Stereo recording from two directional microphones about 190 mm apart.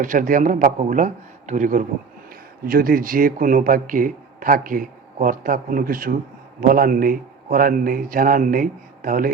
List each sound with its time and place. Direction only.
0.0 s a man's voice: 45° right (ahead or behind)